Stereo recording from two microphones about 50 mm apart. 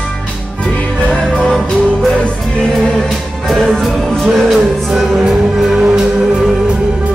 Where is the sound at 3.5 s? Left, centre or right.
Centre.